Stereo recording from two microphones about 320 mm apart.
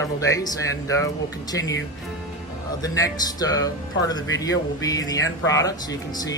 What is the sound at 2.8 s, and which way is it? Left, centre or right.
Speech, centre.